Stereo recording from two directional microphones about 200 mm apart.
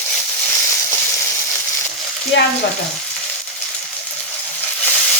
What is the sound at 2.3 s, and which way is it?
Frying, 65° left (ahead or behind).